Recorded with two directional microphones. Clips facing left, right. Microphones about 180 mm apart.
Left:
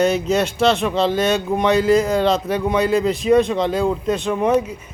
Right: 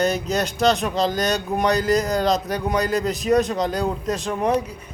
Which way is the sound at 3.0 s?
Centre (ahead or behind).